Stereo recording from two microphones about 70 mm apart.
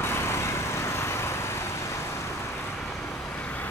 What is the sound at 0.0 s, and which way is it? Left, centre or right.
Vehicle, left.